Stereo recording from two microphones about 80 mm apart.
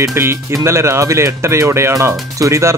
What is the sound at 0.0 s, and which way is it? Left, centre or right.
Speech, right.